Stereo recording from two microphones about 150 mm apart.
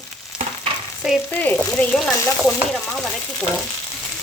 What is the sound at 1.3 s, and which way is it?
Speech, 10° left (ahead or behind).